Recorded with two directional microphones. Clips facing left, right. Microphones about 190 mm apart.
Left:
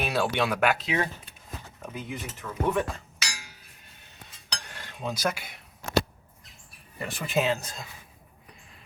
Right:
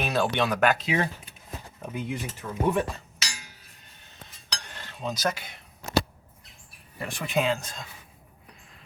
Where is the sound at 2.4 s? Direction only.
30° right (ahead or behind).